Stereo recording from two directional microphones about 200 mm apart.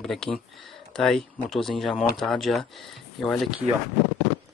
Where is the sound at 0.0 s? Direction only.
Centre (ahead or behind).